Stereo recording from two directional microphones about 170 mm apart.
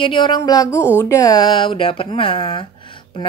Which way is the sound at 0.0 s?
30° left (ahead or behind).